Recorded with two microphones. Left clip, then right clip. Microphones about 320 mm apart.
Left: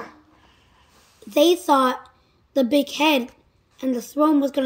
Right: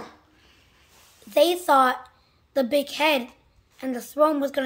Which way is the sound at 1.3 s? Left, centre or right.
Right.